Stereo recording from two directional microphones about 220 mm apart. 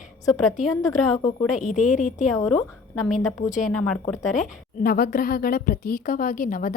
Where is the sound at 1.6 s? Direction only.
35° left (ahead or behind).